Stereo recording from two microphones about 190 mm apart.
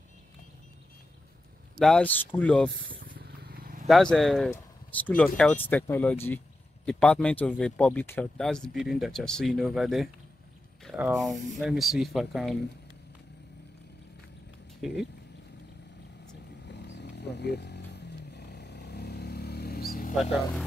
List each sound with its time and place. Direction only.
1.8 s speech: 5° left (ahead or behind)
3.2 s vehicle: 55° right (ahead or behind)
3.8 s speech: centre (ahead or behind)
10.8 s a sound: centre (ahead or behind)
11.1 s speech: centre (ahead or behind)
16.6 s vehicle: 65° left (ahead or behind); by 20.2 s 50° left (ahead or behind)